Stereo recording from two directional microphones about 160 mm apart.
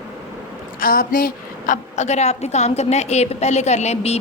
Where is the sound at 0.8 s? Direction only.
65° left (ahead or behind).